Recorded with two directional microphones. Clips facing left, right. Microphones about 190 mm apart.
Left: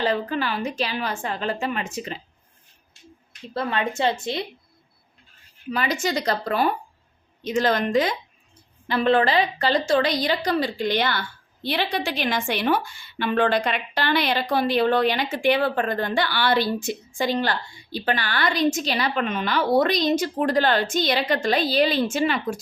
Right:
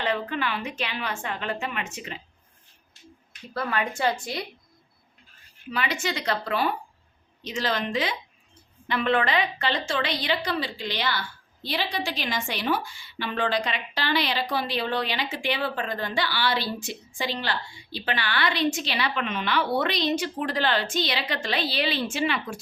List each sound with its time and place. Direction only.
0.0 s a woman's voice: 35° left (ahead or behind)
3.5 s speech: 25° left (ahead or behind)
5.7 s a woman's voice: 40° left (ahead or behind)
8.9 s a woman's voice: 35° left (ahead or behind)